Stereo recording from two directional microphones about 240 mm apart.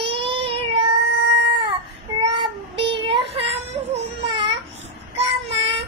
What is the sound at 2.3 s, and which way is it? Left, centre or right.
Child singing, right.